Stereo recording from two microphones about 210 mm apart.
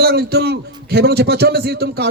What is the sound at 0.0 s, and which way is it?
A man's voice, 50° right (ahead or behind).